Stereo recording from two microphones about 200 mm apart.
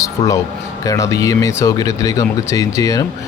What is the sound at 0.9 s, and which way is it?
Speech, 15° left (ahead or behind).